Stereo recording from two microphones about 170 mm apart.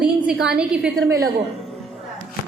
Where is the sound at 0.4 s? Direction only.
5° right (ahead or behind).